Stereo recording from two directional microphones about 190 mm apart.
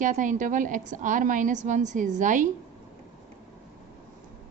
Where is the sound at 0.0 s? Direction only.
40° right (ahead or behind).